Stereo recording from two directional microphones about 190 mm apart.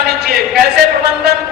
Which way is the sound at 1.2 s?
60° right (ahead or behind).